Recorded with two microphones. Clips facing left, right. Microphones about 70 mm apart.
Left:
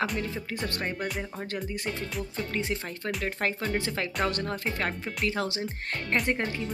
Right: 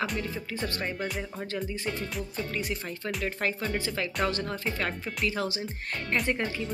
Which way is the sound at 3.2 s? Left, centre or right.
Left.